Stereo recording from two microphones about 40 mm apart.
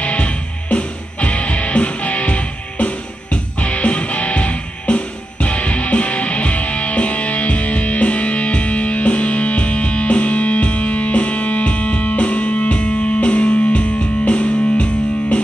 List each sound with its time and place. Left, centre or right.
0.0 s music: left